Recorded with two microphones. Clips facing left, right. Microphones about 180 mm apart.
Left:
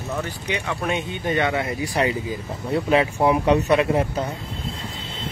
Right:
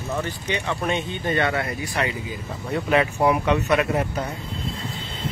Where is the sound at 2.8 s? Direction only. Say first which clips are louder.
Even; 25° left (ahead or behind).